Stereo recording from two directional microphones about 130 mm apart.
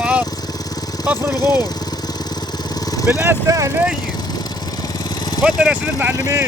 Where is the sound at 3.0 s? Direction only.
20° right (ahead or behind).